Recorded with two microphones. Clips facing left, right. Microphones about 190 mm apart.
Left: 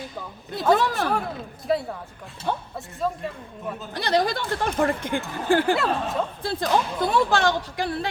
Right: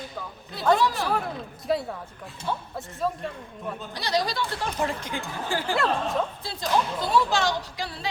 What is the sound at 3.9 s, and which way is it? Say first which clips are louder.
A woman's voice: left 5 dB; 55° left (ahead or behind).